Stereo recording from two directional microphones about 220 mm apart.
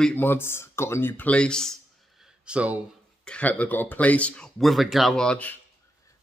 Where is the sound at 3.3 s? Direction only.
5° left (ahead or behind).